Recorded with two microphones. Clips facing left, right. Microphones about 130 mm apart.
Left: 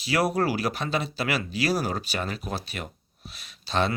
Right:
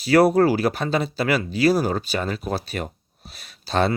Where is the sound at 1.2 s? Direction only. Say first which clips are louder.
Right 10 dB; 35° right (ahead or behind).